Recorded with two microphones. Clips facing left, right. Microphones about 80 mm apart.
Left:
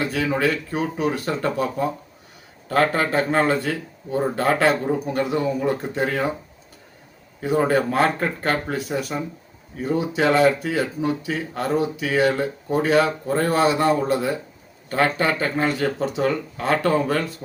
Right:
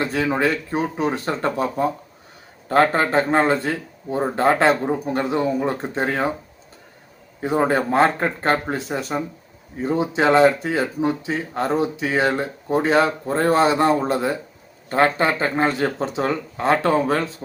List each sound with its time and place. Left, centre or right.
0.0 s speech: right
7.4 s speech: right